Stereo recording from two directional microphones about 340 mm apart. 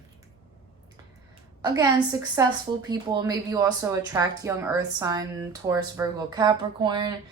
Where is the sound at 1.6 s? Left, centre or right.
Centre.